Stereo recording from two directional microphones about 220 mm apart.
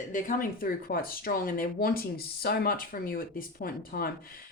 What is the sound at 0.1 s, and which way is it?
Speech, 40° left (ahead or behind).